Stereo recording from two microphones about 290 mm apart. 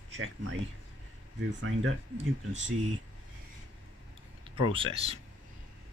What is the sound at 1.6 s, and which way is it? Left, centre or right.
Speech, right.